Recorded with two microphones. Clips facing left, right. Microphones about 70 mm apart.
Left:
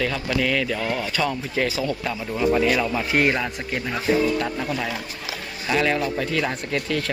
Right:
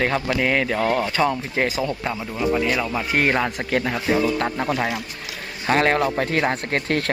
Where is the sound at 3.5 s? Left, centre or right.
Right.